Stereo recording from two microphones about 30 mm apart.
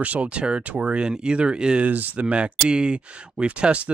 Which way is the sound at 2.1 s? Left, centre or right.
Right.